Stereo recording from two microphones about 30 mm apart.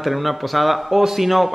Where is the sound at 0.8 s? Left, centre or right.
Centre.